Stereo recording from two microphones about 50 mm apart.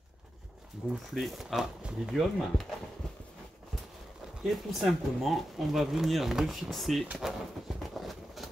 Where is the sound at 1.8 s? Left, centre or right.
Centre.